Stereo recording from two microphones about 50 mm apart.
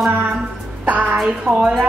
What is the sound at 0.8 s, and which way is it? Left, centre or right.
Speech, right.